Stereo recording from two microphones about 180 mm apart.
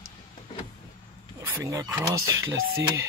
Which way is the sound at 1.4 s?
15° right (ahead or behind).